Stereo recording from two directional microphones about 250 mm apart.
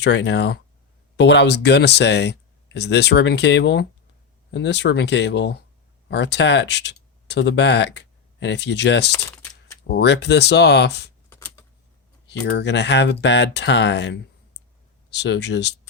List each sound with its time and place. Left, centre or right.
0.0 s speech: left
9.3 s a sound: centre
9.8 s speech: left
11.3 s typing: centre
12.3 s speech: left